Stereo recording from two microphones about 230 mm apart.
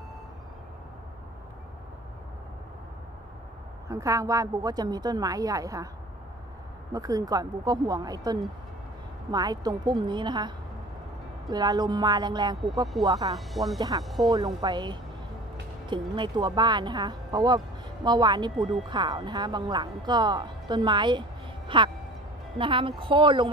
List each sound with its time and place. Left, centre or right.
3.9 s a woman's voice: centre
6.9 s a woman's voice: centre
11.5 s a woman's voice: centre
13.3 s speech: centre
13.7 s a woman's voice: centre
14.0 s speech: centre
14.3 s a woman's voice: centre
16.2 s speech: centre
21.6 s a sound: right
22.6 s speech: right